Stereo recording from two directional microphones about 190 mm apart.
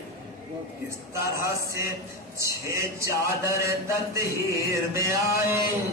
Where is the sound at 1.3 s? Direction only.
15° right (ahead or behind).